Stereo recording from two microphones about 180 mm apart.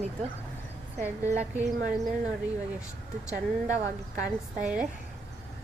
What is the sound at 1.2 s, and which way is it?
Speech, 40° right (ahead or behind).